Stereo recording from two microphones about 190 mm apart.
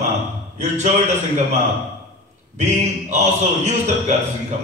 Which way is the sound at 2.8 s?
35° right (ahead or behind).